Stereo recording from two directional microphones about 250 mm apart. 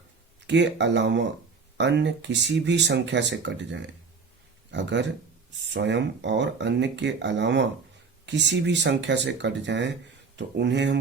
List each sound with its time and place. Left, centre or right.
0.4 s speech: right